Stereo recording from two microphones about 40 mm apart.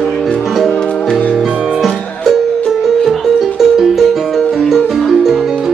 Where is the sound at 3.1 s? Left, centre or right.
Centre.